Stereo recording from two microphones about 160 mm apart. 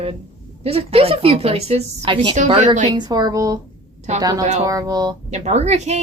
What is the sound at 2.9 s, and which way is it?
Speech, 25° right (ahead or behind).